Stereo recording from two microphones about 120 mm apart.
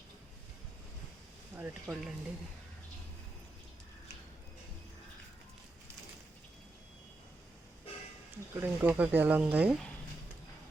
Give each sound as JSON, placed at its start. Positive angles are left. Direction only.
{"t": 1.5, "sound": "speech", "side_deg": -15}
{"t": 8.5, "sound": "speech", "side_deg": -15}